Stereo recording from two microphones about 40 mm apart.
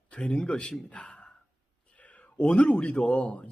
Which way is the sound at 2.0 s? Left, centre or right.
Left.